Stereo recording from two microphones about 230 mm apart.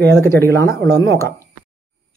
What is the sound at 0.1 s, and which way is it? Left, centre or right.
Speech, centre.